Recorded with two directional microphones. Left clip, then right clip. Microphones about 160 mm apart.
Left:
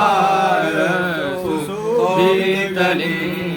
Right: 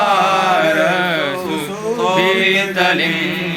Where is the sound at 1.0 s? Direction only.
5° right (ahead or behind).